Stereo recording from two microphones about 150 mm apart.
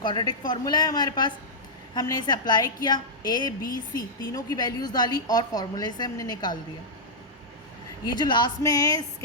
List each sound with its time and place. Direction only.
0.0 s a woman's voice: 30° left (ahead or behind)
8.2 s a woman's voice: 30° left (ahead or behind)